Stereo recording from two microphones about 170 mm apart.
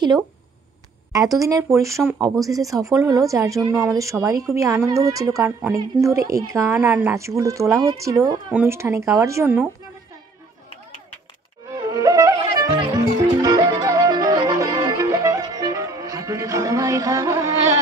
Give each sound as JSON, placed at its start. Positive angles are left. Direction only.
{"t": 1.1, "sound": "a woman's voice", "side_deg": -20}
{"t": 11.7, "sound": "music", "side_deg": -20}